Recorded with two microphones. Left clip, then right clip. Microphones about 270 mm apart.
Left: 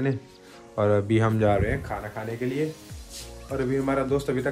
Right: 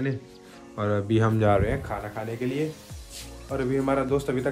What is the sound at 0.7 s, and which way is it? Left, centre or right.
Speech, centre.